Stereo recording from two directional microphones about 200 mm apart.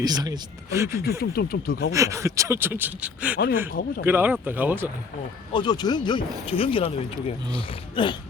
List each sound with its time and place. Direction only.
0.0 s speech: 20° right (ahead or behind)
1.2 s speech: 50° left (ahead or behind)
1.9 s speech: 15° right (ahead or behind)
3.7 s speech: 45° left (ahead or behind)
4.0 s speech: 10° right (ahead or behind)
5.5 s speech: 20° left (ahead or behind)